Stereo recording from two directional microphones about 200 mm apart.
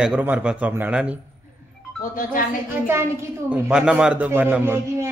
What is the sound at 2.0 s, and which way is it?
Speech, 45° left (ahead or behind).